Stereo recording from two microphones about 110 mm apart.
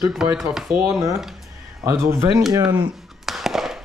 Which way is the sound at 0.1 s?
5° right (ahead or behind).